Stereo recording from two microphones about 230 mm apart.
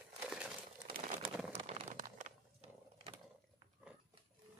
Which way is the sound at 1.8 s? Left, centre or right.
Right.